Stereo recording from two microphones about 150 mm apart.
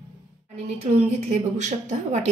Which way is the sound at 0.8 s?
50° right (ahead or behind).